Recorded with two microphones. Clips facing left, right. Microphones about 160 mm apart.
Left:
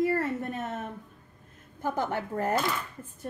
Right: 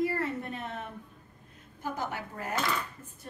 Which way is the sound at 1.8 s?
55° left (ahead or behind).